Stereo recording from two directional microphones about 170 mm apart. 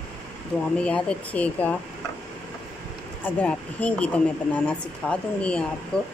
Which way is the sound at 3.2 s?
10° left (ahead or behind).